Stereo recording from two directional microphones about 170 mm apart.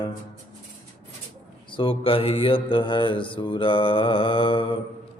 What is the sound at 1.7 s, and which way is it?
Mantra, 30° left (ahead or behind).